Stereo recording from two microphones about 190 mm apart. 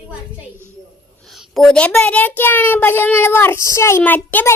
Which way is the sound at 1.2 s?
Centre (ahead or behind).